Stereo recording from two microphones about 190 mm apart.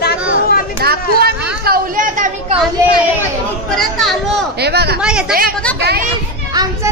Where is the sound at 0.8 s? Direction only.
55° right (ahead or behind).